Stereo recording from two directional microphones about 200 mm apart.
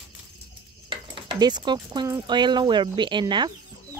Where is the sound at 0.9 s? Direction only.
20° right (ahead or behind).